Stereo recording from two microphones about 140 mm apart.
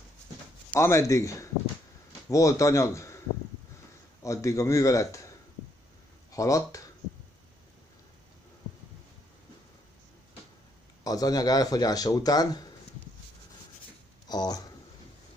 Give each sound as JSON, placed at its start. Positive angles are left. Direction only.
{"t": 0.7, "sound": "a man's voice", "side_deg": 20}
{"t": 4.2, "sound": "speech", "side_deg": 20}
{"t": 6.3, "sound": "speech", "side_deg": 25}
{"t": 11.1, "sound": "speech", "side_deg": 25}
{"t": 14.2, "sound": "speech", "side_deg": 30}